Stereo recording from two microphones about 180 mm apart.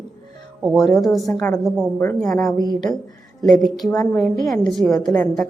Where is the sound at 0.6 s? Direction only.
Centre (ahead or behind).